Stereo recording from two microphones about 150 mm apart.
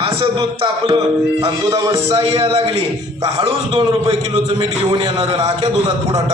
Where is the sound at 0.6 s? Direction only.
30° right (ahead or behind).